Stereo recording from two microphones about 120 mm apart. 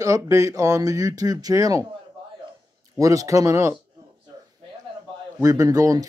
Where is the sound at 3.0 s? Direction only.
25° right (ahead or behind).